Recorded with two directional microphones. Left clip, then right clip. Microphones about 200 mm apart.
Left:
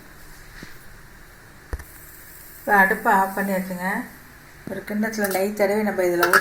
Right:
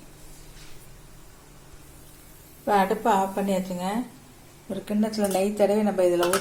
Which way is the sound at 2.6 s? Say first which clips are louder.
Left 4 dB; 15° right (ahead or behind).